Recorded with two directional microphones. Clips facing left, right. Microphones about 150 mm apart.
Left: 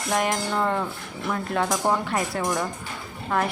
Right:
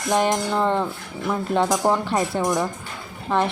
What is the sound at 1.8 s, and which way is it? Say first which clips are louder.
Speech: right 2 dB; 35° right (ahead or behind).